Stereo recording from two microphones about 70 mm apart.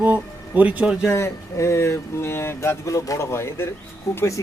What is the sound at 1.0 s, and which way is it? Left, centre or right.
A man's voice, left.